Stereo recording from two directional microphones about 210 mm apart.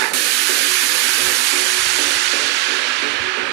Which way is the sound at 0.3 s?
60° right (ahead or behind).